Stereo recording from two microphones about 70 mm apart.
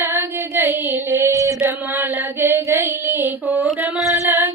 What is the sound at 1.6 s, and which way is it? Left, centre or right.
Music, right.